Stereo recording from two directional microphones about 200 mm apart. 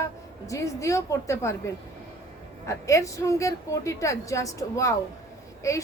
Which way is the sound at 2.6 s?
15° left (ahead or behind).